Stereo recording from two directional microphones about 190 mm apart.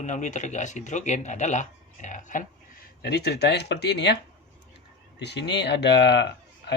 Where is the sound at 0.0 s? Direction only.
40° left (ahead or behind).